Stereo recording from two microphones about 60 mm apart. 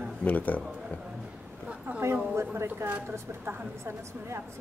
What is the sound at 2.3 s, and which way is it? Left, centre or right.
A woman's voice, right.